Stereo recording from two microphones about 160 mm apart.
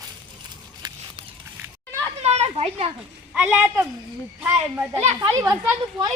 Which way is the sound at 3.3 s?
10° right (ahead or behind).